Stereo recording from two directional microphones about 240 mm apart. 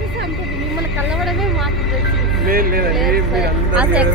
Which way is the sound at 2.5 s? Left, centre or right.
Right.